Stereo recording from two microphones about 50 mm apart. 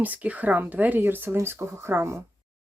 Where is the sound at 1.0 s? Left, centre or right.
Right.